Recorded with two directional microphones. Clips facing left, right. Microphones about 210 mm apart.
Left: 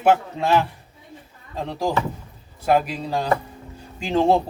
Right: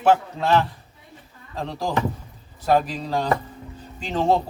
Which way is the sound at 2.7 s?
10° left (ahead or behind).